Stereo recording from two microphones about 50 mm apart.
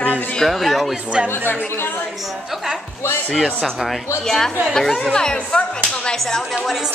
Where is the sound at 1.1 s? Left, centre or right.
Centre.